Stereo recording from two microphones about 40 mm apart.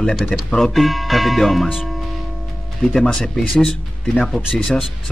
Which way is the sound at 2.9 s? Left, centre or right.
Centre.